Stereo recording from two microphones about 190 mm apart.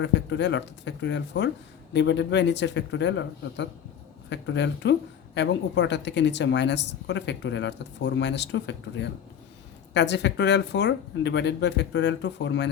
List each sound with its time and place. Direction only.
0.0 s a woman's voice: 65° left (ahead or behind)